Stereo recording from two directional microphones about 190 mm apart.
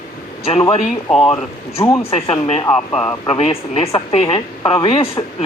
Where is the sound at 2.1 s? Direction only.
35° left (ahead or behind).